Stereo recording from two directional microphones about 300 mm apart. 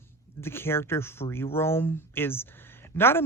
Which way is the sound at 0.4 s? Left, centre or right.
Centre.